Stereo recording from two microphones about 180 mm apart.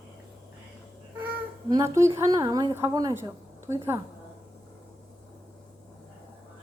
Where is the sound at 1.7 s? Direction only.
15° right (ahead or behind).